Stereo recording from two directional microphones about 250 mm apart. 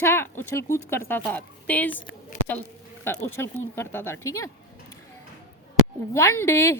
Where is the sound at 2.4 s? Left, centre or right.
Left.